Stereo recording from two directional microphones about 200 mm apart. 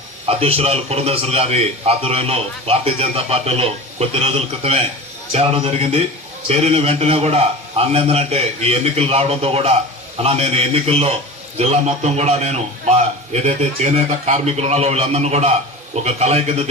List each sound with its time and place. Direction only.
0.3 s a man's voice: 30° right (ahead or behind)